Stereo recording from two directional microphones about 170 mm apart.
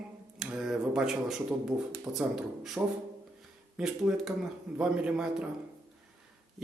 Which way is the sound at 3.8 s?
Centre (ahead or behind).